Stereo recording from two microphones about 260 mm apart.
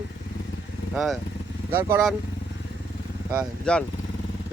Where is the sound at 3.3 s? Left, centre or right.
Centre.